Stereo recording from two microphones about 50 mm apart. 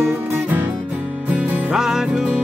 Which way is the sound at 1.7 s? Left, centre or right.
Centre.